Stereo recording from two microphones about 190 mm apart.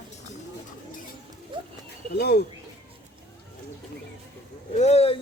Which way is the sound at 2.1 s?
60° left (ahead or behind).